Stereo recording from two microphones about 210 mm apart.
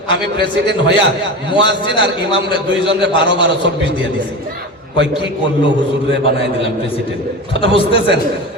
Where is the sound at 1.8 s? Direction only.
25° left (ahead or behind).